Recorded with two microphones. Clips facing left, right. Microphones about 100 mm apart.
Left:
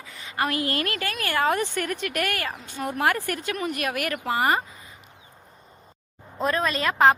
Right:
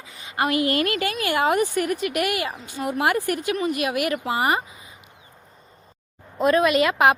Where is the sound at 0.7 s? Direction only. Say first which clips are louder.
Right 5 dB; 40° left (ahead or behind).